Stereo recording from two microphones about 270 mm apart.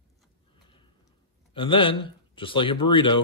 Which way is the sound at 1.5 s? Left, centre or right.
Centre.